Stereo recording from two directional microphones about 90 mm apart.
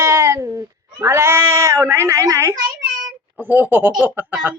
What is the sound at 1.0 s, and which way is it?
Speech, 30° right (ahead or behind).